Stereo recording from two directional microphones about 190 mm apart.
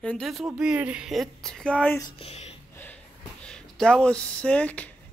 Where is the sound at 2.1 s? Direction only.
35° left (ahead or behind).